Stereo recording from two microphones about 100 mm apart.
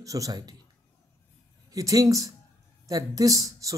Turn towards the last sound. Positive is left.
turn(degrees=-35)  # may be behind; listen again after turning